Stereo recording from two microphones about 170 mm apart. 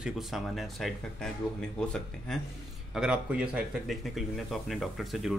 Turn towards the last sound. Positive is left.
turn(degrees=0)  # may be behind; listen again after turning